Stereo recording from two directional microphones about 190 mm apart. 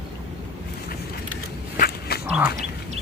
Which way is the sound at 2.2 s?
5° right (ahead or behind).